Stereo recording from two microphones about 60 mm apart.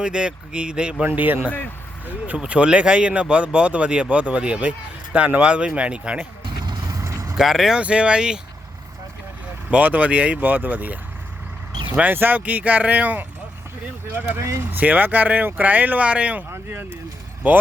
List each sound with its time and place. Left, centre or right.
0.0 s speech: centre
1.0 s speech: right
1.5 s speech: left
2.0 s speech: right
7.0 s vehicle: right
7.3 s speech: centre
7.8 s speech: centre
9.6 s speech: right
16.5 s speech: right
17.4 s speech: right